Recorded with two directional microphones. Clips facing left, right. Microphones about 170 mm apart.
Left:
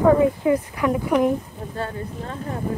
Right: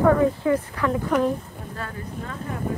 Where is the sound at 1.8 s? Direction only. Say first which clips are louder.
Left 5 dB; 30° left (ahead or behind).